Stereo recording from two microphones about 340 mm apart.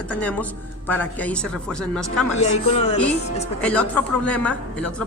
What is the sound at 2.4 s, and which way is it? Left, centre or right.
Speech, centre.